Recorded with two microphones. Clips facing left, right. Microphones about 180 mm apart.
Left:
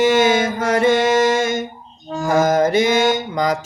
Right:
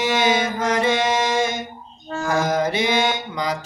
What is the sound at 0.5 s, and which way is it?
Music, 50° left (ahead or behind).